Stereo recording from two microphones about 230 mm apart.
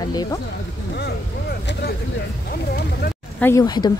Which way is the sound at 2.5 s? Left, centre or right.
Left.